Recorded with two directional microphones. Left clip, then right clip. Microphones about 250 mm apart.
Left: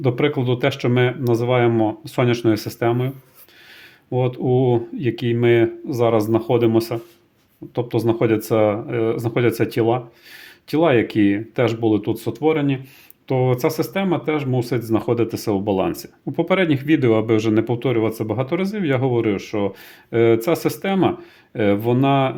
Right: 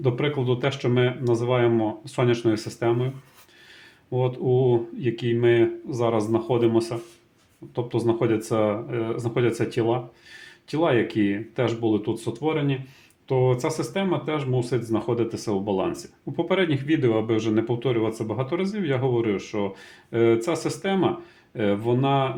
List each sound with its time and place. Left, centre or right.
0.0 s speech: left
4.1 s speech: left